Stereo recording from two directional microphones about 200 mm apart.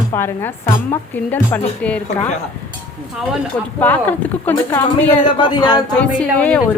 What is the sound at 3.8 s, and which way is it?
A woman's voice, 10° left (ahead or behind).